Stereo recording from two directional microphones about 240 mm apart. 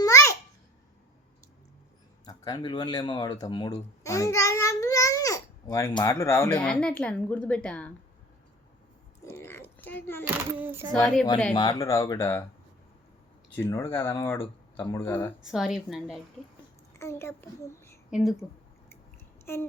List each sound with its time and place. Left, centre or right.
0.0 s babbling: centre
2.2 s a child's voice: centre
9.2 s a sound: centre
10.5 s a sound: centre
11.0 s a woman's voice: centre
11.5 s speech: centre
13.6 s speech: centre
15.4 s a woman's voice: centre
17.0 s speech: centre
18.1 s a woman's voice: centre
19.5 s speech: centre